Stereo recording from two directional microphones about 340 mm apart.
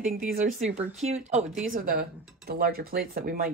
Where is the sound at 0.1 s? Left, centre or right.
Right.